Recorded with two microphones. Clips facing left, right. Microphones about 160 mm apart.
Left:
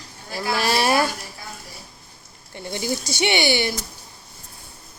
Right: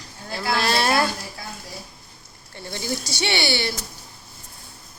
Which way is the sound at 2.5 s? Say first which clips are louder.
Left 3 dB; 15° left (ahead or behind).